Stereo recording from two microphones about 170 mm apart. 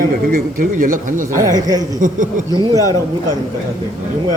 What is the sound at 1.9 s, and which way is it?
Speech, 50° right (ahead or behind).